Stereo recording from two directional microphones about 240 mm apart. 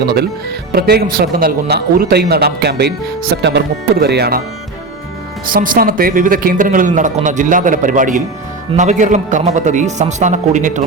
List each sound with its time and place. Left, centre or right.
0.7 s speech: right
5.5 s speech: right